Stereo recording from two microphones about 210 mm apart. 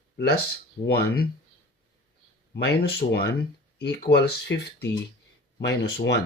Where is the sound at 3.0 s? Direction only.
35° left (ahead or behind).